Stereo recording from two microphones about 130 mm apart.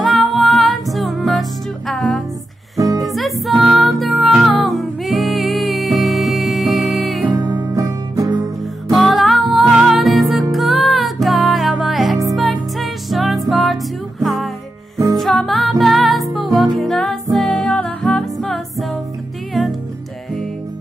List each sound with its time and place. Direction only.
0.0 s music: centre (ahead or behind)
2.8 s music: 30° right (ahead or behind)
3.1 s music: centre (ahead or behind)
7.2 s music: 30° right (ahead or behind)
8.9 s music: centre (ahead or behind)